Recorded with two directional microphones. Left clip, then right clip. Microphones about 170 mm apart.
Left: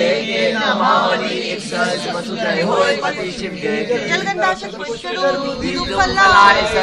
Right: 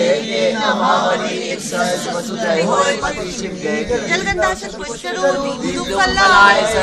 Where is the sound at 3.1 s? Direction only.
Centre (ahead or behind).